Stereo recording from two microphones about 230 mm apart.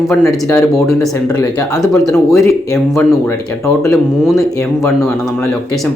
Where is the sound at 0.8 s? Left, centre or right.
Centre.